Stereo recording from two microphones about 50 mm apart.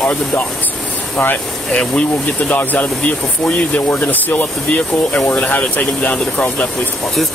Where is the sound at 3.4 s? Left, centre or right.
Left.